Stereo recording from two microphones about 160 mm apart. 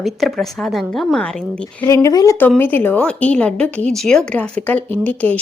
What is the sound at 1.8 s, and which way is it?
Speech, 20° left (ahead or behind).